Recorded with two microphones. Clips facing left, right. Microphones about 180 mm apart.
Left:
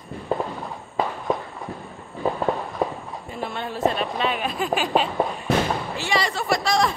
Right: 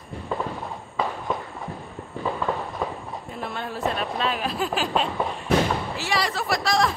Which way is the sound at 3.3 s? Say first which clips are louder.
Left 3 dB; centre (ahead or behind).